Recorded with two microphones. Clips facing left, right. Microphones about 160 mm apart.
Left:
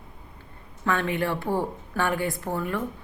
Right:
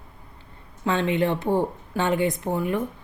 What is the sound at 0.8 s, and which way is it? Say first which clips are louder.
A woman's voice: right 3 dB; 20° right (ahead or behind).